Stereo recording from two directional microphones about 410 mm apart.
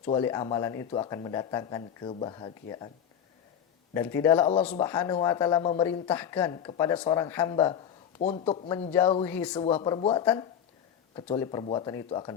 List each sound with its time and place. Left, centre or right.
0.0 s speech: centre
3.9 s speech: centre